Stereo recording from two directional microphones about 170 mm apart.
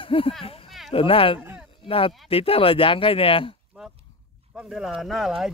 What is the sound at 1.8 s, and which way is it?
Speech, 35° left (ahead or behind).